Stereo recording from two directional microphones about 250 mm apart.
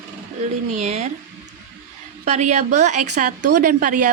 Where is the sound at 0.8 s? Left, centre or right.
Right.